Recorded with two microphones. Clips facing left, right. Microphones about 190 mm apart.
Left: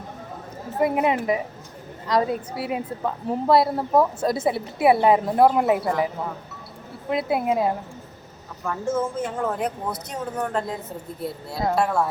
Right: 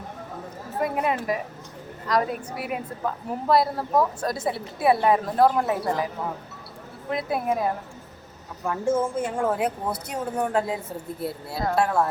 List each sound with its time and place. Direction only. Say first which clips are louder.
0.8 s a woman's voice: left 4 dB; 25° left (ahead or behind)
7.1 s a woman's voice: left 3 dB; 25° left (ahead or behind)
9.0 s a woman's voice: even; 10° right (ahead or behind)